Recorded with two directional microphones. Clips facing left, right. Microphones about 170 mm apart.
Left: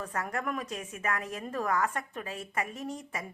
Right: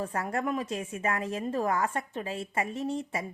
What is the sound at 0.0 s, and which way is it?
A woman's voice, 30° right (ahead or behind).